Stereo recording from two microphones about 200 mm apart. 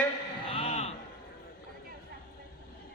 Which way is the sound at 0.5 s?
30° left (ahead or behind).